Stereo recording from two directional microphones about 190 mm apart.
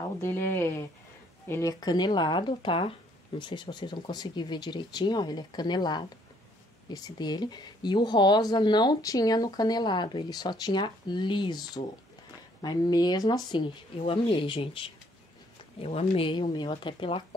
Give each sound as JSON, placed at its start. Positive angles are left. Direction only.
{"t": 0.2, "sound": "speech", "side_deg": 15}